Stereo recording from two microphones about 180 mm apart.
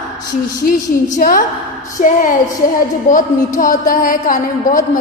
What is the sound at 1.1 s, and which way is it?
A woman's voice, 50° left (ahead or behind).